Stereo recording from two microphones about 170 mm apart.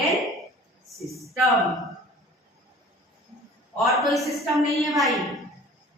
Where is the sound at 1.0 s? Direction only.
Centre (ahead or behind).